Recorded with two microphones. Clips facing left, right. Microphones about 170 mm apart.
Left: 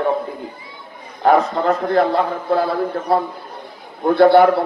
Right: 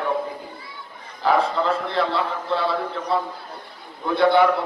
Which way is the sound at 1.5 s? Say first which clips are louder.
Left 6 dB; 45° left (ahead or behind).